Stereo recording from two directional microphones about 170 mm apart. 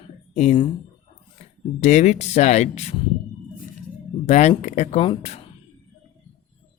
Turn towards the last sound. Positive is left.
turn(degrees=35)  # may be behind; listen again after turning